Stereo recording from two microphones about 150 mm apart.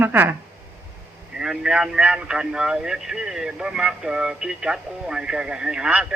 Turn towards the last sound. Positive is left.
turn(degrees=-5)  # may be behind; listen again after turning